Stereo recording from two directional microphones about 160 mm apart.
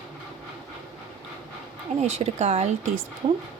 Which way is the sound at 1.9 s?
45° right (ahead or behind).